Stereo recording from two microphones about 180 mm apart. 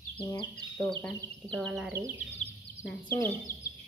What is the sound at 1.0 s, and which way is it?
Speech, 5° left (ahead or behind).